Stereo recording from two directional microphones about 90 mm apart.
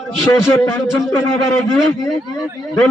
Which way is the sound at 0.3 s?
35° left (ahead or behind).